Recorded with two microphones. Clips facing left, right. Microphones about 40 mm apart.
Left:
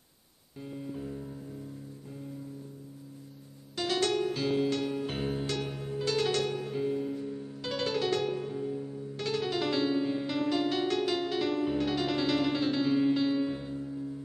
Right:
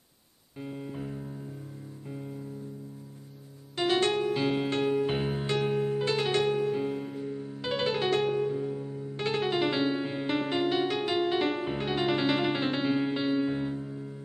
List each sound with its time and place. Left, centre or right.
0.6 s music: right
3.7 s music: right